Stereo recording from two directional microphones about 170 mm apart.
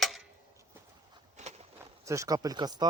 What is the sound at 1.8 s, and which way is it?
Speech, 20° right (ahead or behind).